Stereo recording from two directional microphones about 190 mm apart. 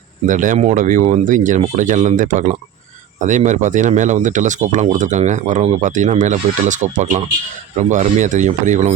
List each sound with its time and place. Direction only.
0.3 s speech: 45° right (ahead or behind)